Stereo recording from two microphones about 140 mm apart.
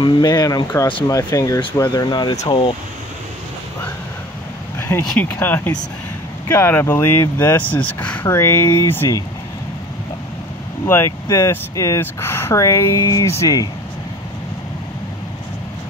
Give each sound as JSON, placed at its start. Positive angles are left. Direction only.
{"t": 0.0, "sound": "speech", "side_deg": 30}
{"t": 2.3, "sound": "speech", "side_deg": 45}
{"t": 4.7, "sound": "speech", "side_deg": 15}
{"t": 11.2, "sound": "speech", "side_deg": 20}